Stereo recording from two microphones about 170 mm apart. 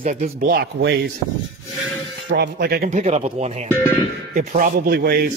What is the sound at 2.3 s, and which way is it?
Speech, 70° right (ahead or behind).